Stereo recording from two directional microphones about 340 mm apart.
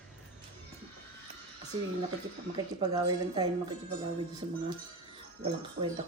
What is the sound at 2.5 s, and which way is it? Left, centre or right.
Speech, centre.